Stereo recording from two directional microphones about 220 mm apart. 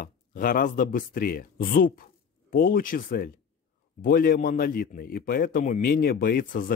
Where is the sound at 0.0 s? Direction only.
40° left (ahead or behind).